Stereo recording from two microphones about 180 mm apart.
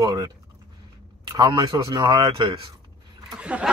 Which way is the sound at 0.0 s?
20° right (ahead or behind).